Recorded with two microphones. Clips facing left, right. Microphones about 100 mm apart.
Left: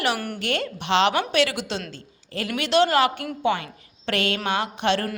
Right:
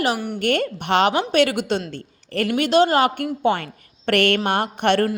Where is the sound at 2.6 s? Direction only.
40° right (ahead or behind).